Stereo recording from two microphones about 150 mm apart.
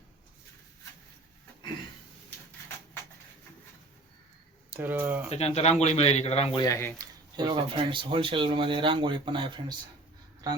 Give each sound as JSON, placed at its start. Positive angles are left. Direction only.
{"t": 4.7, "sound": "speech", "side_deg": -15}
{"t": 5.3, "sound": "a man's voice", "side_deg": 45}
{"t": 6.6, "sound": "speech", "side_deg": 20}
{"t": 7.0, "sound": "speech", "side_deg": -30}